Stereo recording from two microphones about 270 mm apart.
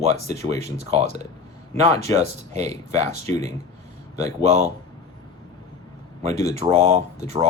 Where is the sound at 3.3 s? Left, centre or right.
Centre.